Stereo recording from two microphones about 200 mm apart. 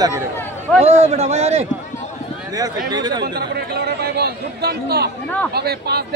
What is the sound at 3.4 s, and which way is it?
A man's voice, 50° right (ahead or behind).